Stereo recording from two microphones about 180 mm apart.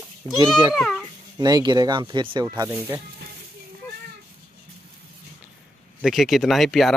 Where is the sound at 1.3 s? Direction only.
20° right (ahead or behind).